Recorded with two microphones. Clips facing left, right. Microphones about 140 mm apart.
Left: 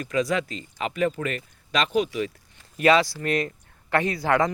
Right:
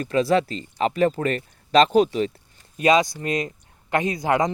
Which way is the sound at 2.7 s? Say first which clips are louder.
Right 1 dB; 20° right (ahead or behind).